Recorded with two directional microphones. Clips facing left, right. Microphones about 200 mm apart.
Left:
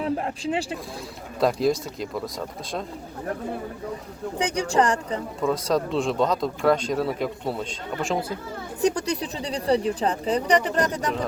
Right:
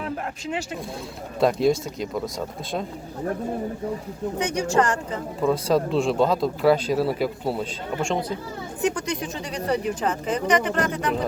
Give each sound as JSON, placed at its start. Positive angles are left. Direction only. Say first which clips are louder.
{"t": 0.0, "sound": "speech", "louder": "left 4 dB", "side_deg": 30}
{"t": 1.4, "sound": "speech", "louder": "right 2 dB", "side_deg": 0}
{"t": 4.4, "sound": "speech", "louder": "even", "side_deg": 35}
{"t": 5.4, "sound": "speech", "louder": "right 3 dB", "side_deg": 0}
{"t": 8.8, "sound": "speech", "louder": "left 2 dB", "side_deg": 35}